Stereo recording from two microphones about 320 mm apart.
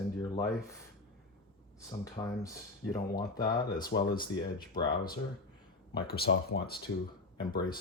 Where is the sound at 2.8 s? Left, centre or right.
Left.